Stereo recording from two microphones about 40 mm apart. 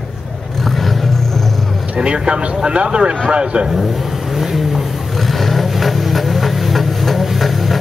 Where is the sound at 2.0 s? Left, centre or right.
Right.